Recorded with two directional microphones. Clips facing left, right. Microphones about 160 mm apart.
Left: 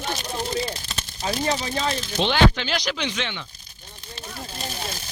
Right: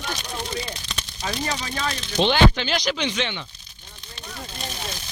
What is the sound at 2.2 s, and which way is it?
Speech, centre (ahead or behind).